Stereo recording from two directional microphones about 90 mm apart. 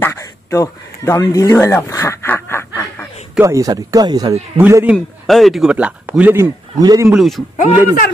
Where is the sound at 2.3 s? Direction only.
25° left (ahead or behind).